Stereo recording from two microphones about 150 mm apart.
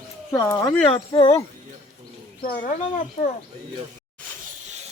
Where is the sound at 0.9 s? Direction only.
35° left (ahead or behind).